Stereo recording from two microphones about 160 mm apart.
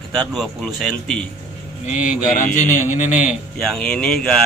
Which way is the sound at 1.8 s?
55° left (ahead or behind).